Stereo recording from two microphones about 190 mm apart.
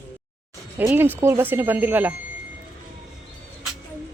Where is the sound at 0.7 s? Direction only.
10° right (ahead or behind).